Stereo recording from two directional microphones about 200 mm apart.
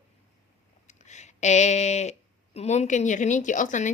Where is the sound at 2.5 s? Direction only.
35° left (ahead or behind).